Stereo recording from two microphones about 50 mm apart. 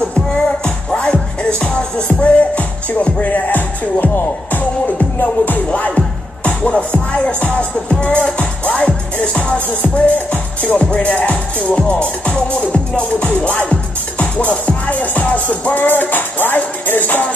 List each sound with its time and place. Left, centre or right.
0.3 s music: left
6.9 s speech: left